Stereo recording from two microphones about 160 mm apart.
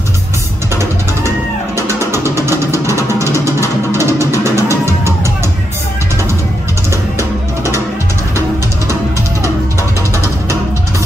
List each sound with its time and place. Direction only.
2.5 s music: 20° left (ahead or behind)
3.9 s music: 15° right (ahead or behind)
4.3 s music: 20° left (ahead or behind)